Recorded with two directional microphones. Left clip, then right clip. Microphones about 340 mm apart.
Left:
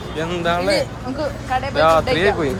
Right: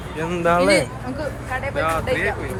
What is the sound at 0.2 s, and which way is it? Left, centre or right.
Speech, centre.